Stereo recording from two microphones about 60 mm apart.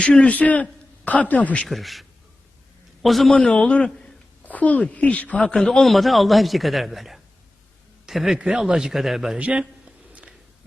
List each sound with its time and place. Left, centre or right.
0.0 s a man's voice: left
1.6 s a man's voice: centre
3.3 s a man's voice: centre
5.5 s a man's voice: centre
9.4 s a man's voice: centre
10.1 s a sound: right